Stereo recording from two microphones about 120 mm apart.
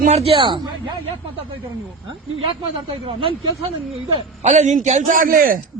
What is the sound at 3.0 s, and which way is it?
Speech, 50° right (ahead or behind).